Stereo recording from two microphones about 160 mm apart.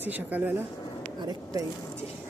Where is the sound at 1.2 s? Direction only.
25° right (ahead or behind).